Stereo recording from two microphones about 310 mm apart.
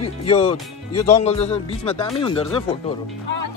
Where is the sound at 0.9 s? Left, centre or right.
Left.